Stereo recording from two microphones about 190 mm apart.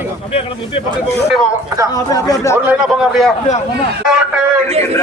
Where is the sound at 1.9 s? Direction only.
15° left (ahead or behind).